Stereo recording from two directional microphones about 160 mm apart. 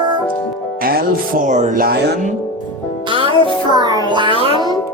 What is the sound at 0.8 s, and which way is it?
Speech, 65° right (ahead or behind).